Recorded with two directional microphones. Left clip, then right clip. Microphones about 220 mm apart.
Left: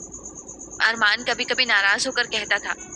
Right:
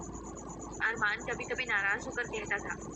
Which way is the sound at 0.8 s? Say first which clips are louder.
Left 12 dB; 45° left (ahead or behind).